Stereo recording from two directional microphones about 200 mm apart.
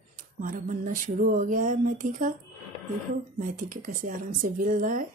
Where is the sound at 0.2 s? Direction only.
45° right (ahead or behind).